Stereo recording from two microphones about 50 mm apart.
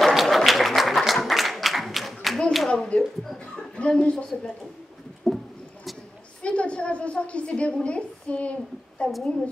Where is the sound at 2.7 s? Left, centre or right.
Left.